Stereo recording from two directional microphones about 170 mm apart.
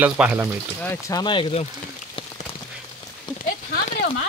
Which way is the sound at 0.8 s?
20° left (ahead or behind).